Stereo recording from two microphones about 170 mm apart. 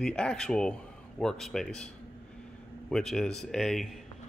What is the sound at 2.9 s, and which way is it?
Speech, 5° left (ahead or behind).